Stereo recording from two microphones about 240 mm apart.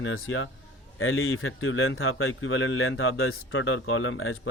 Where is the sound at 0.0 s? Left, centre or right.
Left.